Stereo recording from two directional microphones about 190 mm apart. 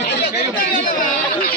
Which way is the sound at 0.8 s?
45° left (ahead or behind).